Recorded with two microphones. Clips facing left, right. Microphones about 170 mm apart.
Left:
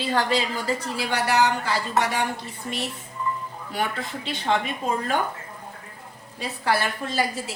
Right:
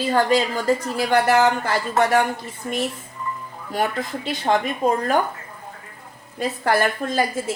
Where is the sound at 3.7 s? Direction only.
45° right (ahead or behind).